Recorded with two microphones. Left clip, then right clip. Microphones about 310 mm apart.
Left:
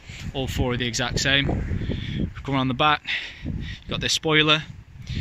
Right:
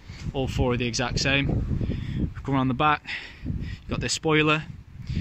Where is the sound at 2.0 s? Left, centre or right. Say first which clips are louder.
Left 2 dB; centre.